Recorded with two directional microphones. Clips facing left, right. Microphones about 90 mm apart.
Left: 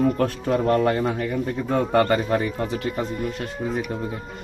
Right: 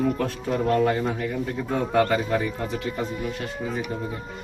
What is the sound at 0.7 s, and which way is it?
Speech, 55° left (ahead or behind).